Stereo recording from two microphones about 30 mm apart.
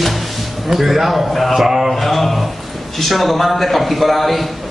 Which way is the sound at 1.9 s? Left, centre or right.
Centre.